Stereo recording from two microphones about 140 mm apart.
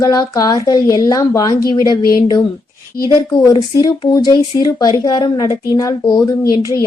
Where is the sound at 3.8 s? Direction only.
25° left (ahead or behind).